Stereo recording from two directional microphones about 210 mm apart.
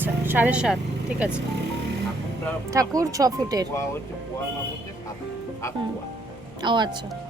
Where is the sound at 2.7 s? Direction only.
15° right (ahead or behind).